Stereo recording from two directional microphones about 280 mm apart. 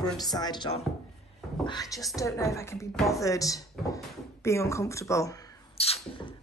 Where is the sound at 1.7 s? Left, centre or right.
Centre.